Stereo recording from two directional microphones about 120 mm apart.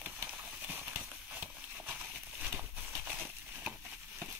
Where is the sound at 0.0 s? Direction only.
15° right (ahead or behind).